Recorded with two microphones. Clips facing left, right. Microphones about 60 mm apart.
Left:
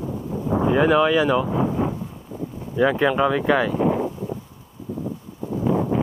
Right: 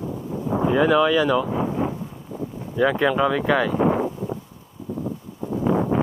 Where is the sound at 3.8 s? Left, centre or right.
Right.